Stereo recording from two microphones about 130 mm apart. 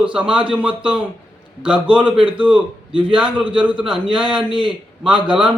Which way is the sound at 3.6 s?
10° right (ahead or behind).